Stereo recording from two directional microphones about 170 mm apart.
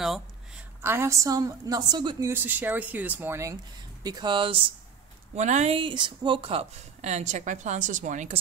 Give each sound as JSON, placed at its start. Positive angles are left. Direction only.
{"t": 0.8, "sound": "a woman's voice", "side_deg": -15}
{"t": 2.2, "sound": "a woman's voice", "side_deg": -10}
{"t": 5.3, "sound": "speech", "side_deg": -40}